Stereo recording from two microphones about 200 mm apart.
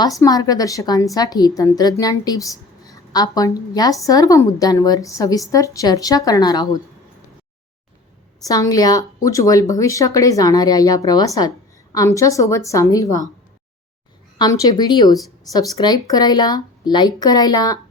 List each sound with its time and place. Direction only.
0.0 s a woman's voice: 15° left (ahead or behind)
8.4 s speech: 15° left (ahead or behind)
14.3 s a woman's voice: 20° left (ahead or behind)